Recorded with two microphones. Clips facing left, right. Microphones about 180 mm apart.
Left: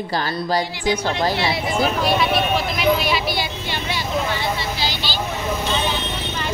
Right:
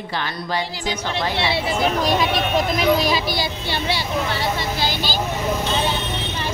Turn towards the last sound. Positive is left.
turn(degrees=-45)  # may be behind; listen again after turning